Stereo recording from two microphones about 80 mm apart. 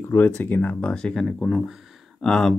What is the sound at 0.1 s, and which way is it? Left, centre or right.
Speech, left.